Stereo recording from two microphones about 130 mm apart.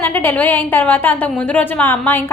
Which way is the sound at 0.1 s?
15° left (ahead or behind).